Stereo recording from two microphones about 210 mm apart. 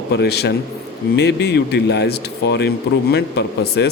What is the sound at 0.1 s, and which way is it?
A man's voice, 50° left (ahead or behind).